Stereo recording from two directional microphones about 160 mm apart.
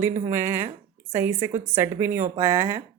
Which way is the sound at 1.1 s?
15° right (ahead or behind).